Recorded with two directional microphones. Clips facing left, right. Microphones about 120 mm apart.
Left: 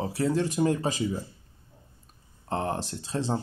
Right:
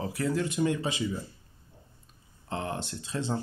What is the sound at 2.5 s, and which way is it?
Speech, 40° left (ahead or behind).